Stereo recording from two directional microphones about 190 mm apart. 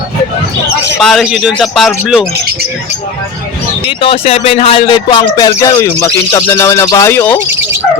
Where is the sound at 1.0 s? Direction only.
Centre (ahead or behind).